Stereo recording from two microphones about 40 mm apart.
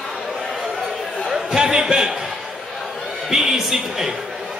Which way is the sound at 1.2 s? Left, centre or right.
Centre.